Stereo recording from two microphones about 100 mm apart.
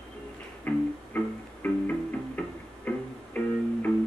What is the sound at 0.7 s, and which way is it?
Music, 15° left (ahead or behind).